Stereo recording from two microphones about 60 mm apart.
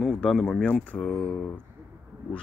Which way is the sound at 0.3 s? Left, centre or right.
Centre.